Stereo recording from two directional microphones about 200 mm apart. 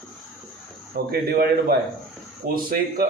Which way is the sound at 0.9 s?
50° right (ahead or behind).